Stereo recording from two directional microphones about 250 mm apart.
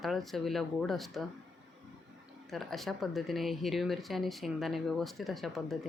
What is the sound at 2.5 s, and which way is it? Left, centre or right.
Speech, centre.